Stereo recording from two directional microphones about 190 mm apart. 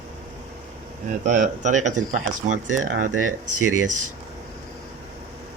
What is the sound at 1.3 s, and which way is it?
Speech, 40° right (ahead or behind).